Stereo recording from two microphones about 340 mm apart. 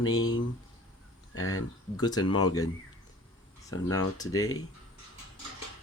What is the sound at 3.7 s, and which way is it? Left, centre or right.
Speech, left.